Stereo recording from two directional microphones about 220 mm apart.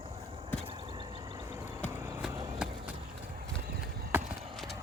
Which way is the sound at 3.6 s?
45° right (ahead or behind).